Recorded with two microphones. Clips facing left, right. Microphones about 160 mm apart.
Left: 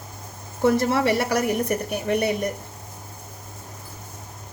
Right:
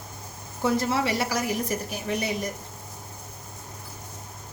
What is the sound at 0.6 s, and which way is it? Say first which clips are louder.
A woman's voice: left 5 dB; 60° left (ahead or behind).